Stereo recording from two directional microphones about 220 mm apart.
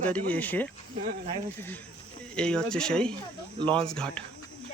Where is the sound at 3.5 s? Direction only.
20° right (ahead or behind).